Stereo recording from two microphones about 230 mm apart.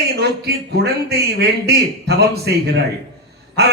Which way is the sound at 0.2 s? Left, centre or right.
Right.